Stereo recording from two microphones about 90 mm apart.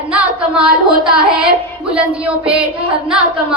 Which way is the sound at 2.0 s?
15° right (ahead or behind).